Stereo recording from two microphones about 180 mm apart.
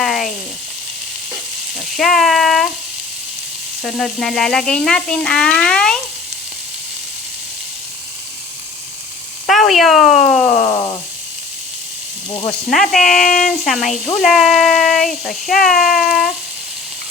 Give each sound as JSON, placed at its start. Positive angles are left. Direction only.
{"t": 0.0, "sound": "frying", "side_deg": 0}
{"t": 2.0, "sound": "a sound", "side_deg": 0}
{"t": 3.8, "sound": "speech", "side_deg": 0}
{"t": 9.5, "sound": "speech", "side_deg": 0}
{"t": 10.7, "sound": "a sound", "side_deg": 25}
{"t": 12.6, "sound": "speech", "side_deg": 0}
{"t": 15.7, "sound": "child singing", "side_deg": 55}